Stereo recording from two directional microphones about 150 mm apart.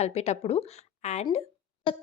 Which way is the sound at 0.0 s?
45° left (ahead or behind).